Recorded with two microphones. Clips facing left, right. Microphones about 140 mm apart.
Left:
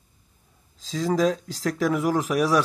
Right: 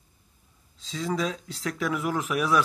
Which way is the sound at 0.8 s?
40° left (ahead or behind).